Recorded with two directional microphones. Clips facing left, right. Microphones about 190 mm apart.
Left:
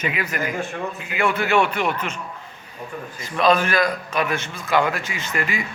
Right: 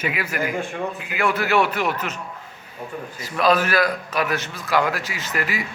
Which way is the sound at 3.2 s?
5° right (ahead or behind).